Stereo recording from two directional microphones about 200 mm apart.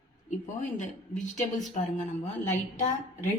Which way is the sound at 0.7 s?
40° left (ahead or behind).